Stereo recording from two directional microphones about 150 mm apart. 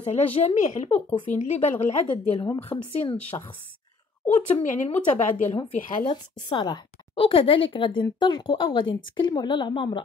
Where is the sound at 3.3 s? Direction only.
30° left (ahead or behind).